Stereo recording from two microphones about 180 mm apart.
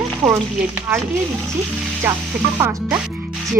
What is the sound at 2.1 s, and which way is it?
Speech, 15° right (ahead or behind).